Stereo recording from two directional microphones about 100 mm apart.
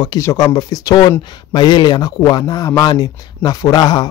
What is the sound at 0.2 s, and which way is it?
Speech, 35° left (ahead or behind).